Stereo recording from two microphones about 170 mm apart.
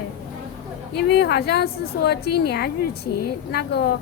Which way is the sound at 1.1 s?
70° left (ahead or behind).